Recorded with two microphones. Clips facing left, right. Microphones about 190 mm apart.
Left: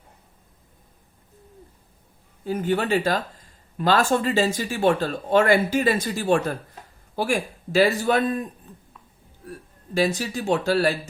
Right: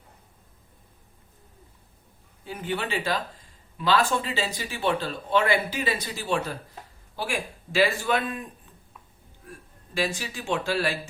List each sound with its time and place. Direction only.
2.4 s a man's voice: 40° left (ahead or behind)
9.5 s a man's voice: 40° left (ahead or behind)